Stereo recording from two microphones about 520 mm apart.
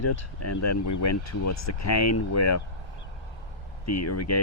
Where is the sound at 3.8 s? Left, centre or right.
Left.